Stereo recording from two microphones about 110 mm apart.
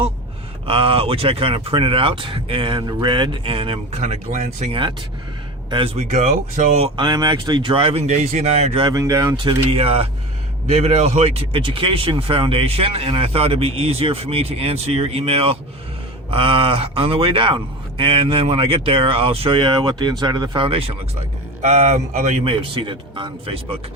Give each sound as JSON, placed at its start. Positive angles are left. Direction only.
{"t": 0.7, "sound": "speech", "side_deg": -55}
{"t": 4.7, "sound": "speech", "side_deg": -50}
{"t": 5.7, "sound": "speech", "side_deg": -65}
{"t": 6.9, "sound": "speech", "side_deg": -45}
{"t": 7.8, "sound": "speech", "side_deg": -65}
{"t": 8.9, "sound": "speech", "side_deg": -30}
{"t": 9.3, "sound": "speech", "side_deg": -45}
{"t": 9.6, "sound": "speech", "side_deg": -65}
{"t": 10.7, "sound": "speech", "side_deg": -75}
{"t": 20.7, "sound": "speech", "side_deg": -60}
{"t": 21.6, "sound": "speech", "side_deg": -90}
{"t": 22.6, "sound": "speech", "side_deg": -50}